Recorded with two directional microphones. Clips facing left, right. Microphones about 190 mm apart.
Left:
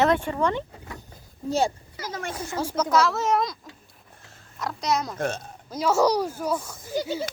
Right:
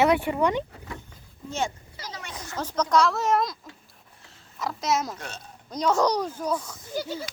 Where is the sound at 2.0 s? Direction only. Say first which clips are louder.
Left 7 dB; 50° left (ahead or behind).